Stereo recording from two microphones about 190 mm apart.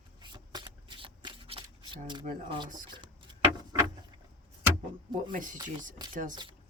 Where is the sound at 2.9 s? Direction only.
25° right (ahead or behind).